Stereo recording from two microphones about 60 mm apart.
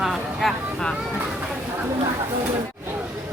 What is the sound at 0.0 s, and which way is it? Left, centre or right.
Vehicle, centre.